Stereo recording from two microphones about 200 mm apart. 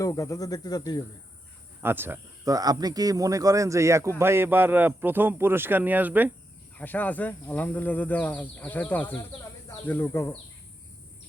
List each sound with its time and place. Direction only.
0.0 s speech: 15° left (ahead or behind)
1.8 s speech: 10° right (ahead or behind)
6.7 s speech: 10° left (ahead or behind)